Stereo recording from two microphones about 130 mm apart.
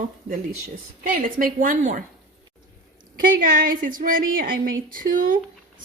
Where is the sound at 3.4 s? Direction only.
90° right.